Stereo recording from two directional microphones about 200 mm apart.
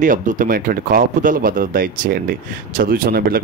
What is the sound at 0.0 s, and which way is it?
Speech, 40° right (ahead or behind).